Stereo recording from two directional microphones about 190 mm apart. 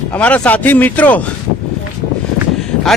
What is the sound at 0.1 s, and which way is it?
Speech, 10° left (ahead or behind).